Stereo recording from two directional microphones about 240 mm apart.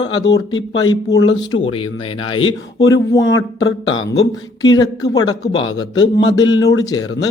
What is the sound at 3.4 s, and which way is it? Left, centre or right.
Speech, left.